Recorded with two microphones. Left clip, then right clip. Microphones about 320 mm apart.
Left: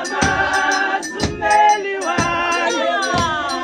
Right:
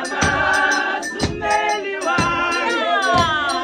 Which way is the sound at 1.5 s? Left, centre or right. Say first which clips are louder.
Left 6 dB; left.